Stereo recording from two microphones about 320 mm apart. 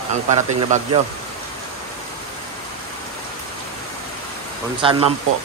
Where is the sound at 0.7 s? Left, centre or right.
Right.